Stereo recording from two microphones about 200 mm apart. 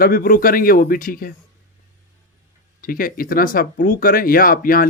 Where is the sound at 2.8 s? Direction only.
45° left (ahead or behind).